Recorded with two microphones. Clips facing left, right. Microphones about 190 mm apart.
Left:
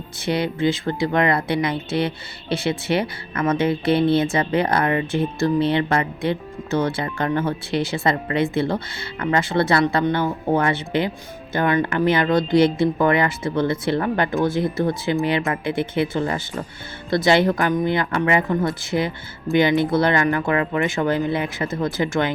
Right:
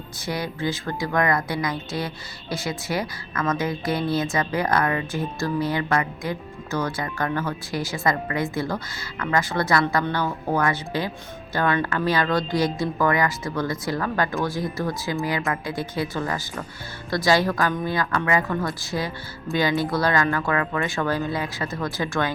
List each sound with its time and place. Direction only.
0.3 s speech: 25° left (ahead or behind)